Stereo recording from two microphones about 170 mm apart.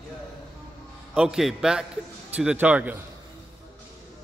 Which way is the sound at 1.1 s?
5° right (ahead or behind).